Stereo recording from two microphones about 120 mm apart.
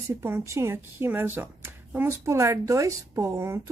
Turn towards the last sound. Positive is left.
turn(degrees=-20)  # may be behind; listen again after turning